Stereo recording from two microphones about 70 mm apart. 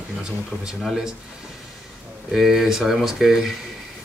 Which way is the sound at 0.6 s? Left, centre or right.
Centre.